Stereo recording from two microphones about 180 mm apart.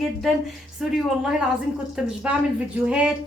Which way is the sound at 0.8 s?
5° right (ahead or behind).